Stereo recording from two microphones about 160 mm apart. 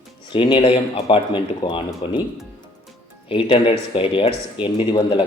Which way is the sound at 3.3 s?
35° left (ahead or behind).